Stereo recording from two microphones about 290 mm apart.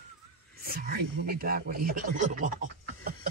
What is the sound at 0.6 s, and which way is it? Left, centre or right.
A man's voice, right.